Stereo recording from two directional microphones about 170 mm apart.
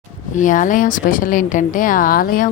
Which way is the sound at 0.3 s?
50° left (ahead or behind).